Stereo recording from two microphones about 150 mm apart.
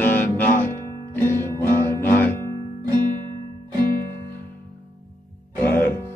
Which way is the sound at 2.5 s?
30° right (ahead or behind).